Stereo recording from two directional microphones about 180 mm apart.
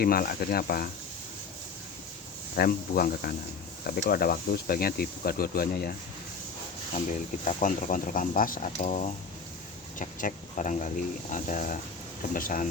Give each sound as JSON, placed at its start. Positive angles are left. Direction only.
{"t": 0.0, "sound": "speech", "side_deg": 55}
{"t": 2.6, "sound": "speech", "side_deg": 55}
{"t": 7.4, "sound": "speech", "side_deg": 50}